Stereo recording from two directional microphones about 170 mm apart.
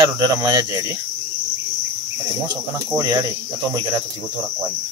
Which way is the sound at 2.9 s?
20° right (ahead or behind).